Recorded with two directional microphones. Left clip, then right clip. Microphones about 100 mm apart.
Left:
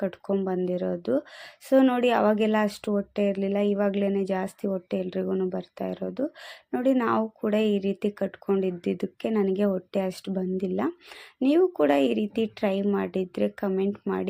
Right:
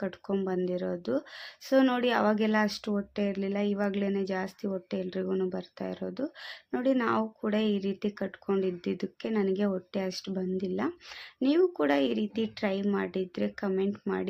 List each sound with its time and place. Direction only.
0.4 s speech: 40° left (ahead or behind)